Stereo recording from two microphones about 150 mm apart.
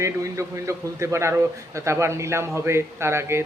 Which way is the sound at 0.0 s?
20° right (ahead or behind).